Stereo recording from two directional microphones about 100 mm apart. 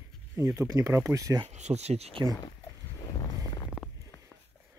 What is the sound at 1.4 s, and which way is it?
Speech, 90° right.